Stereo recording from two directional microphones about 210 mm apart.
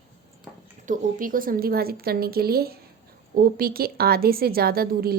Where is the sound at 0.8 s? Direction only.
40° right (ahead or behind).